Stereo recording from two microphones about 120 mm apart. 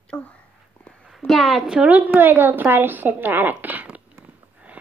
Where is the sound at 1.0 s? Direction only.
Centre (ahead or behind).